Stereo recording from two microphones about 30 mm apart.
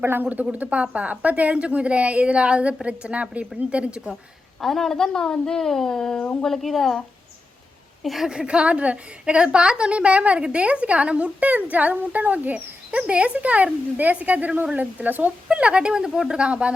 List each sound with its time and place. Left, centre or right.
0.2 s speech: right
0.5 s a woman's voice: right
1.5 s a woman's voice: right
4.6 s a woman's voice: centre
6.5 s a woman's voice: centre
8.0 s a woman's voice: centre
8.3 s a woman's voice: right
8.6 s a woman's voice: right
12.9 s a woman's voice: right
15.4 s a woman's voice: right
16.4 s a woman's voice: right